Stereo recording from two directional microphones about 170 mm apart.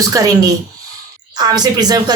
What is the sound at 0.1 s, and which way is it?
A woman's voice, 20° right (ahead or behind).